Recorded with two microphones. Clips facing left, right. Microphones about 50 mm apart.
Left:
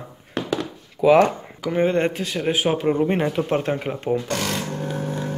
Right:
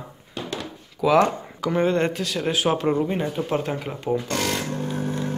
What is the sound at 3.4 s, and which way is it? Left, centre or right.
Speech, left.